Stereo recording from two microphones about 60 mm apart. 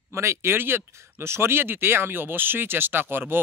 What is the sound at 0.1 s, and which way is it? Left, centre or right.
Speech, right.